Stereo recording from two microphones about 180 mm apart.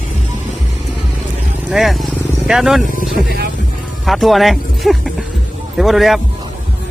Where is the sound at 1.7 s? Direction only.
Centre (ahead or behind).